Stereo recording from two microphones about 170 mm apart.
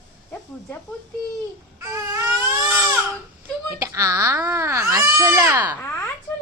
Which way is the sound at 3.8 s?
20° right (ahead or behind).